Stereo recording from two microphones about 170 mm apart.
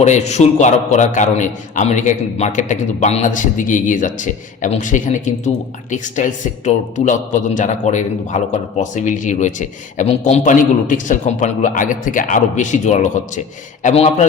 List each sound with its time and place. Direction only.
0.0 s a man's voice: 40° left (ahead or behind)